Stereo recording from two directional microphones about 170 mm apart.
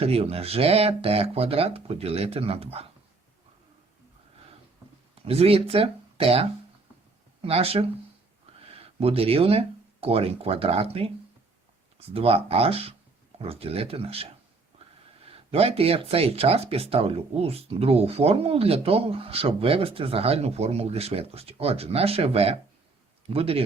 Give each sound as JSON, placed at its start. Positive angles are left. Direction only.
{"t": 0.0, "sound": "speech", "side_deg": -35}
{"t": 5.2, "sound": "speech", "side_deg": -35}
{"t": 15.3, "sound": "speech", "side_deg": -35}